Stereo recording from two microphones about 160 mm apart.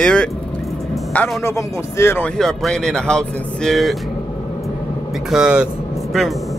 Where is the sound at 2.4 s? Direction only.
5° left (ahead or behind).